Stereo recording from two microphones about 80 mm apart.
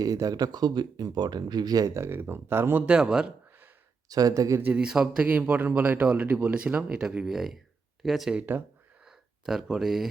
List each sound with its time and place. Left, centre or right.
0.0 s speech: right
2.0 s speech: right
2.8 s speech: centre
4.1 s speech: right
4.6 s speech: centre
5.3 s speech: centre
8.4 s speech: right
9.0 s speech: centre